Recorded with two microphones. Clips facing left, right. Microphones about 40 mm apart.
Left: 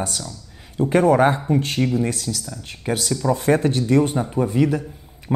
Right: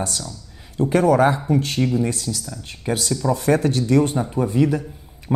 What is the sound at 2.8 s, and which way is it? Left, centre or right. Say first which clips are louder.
A man's voice: even; left.